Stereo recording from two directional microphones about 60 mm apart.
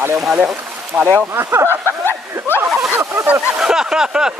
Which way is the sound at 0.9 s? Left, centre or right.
Right.